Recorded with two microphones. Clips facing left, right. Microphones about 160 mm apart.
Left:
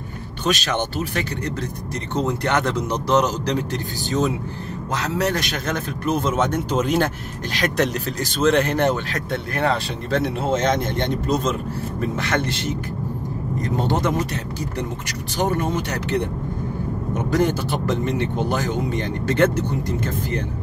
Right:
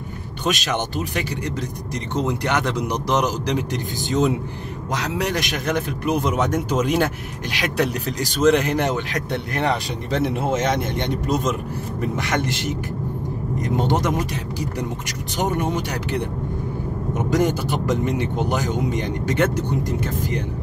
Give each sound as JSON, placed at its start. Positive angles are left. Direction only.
{"t": 0.5, "sound": "speech", "side_deg": -15}
{"t": 17.3, "sound": "speech", "side_deg": -15}